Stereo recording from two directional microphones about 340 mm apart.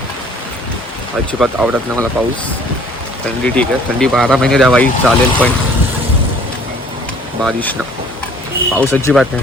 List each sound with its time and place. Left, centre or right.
1.3 s speech: centre
3.4 s speech: centre
7.4 s speech: centre